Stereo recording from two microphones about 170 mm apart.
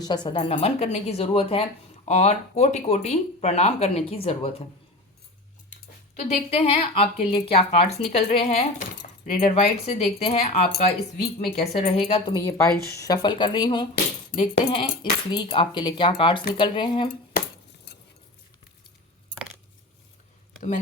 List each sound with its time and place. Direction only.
0.0 s speech: 25° left (ahead or behind)
6.1 s speech: 40° left (ahead or behind)
12.9 s speech: 20° left (ahead or behind)